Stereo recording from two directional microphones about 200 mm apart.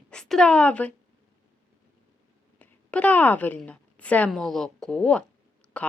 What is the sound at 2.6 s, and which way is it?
A woman's voice, 5° left (ahead or behind).